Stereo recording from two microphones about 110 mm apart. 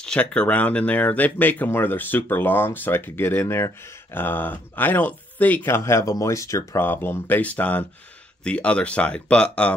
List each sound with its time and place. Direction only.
0.0 s speech: 10° left (ahead or behind)